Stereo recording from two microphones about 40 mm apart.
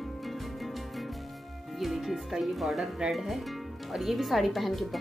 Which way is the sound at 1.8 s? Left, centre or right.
Centre.